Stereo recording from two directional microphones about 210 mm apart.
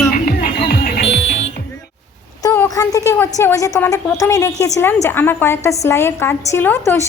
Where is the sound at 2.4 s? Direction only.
15° left (ahead or behind).